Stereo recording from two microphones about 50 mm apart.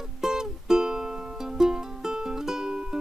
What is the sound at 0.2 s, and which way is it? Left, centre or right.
Music, centre.